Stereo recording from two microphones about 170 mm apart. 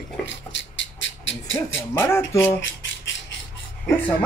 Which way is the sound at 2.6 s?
90° left.